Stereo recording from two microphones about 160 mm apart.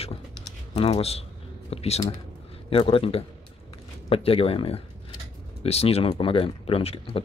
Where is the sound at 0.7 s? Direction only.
40° left (ahead or behind).